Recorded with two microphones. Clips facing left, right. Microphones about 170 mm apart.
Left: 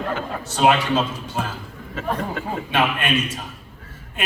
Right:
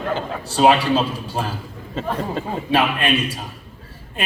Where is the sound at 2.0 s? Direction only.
30° right (ahead or behind).